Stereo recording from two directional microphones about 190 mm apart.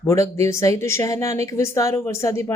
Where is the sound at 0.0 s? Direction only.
15° left (ahead or behind).